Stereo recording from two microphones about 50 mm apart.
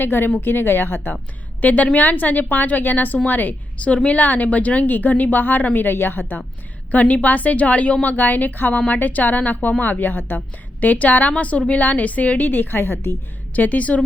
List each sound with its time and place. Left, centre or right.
0.0 s speech: left
1.6 s a woman's voice: left
3.8 s a woman's voice: left
6.9 s a woman's voice: left
13.5 s a woman's voice: left